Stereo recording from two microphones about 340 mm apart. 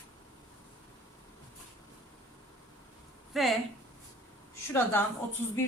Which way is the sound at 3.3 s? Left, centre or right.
Centre.